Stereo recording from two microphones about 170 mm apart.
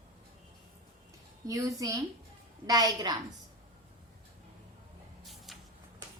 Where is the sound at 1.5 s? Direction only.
20° right (ahead or behind).